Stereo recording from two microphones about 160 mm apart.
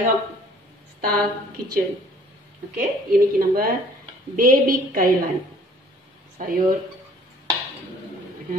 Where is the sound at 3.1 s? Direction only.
65° right (ahead or behind).